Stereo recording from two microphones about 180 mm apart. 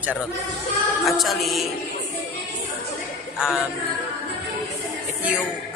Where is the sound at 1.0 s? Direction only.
Centre (ahead or behind).